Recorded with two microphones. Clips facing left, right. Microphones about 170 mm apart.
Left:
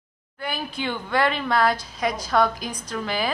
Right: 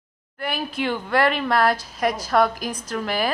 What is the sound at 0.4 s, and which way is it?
Speech, centre (ahead or behind).